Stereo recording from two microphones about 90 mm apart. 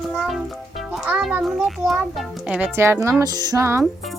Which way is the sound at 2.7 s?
30° right (ahead or behind).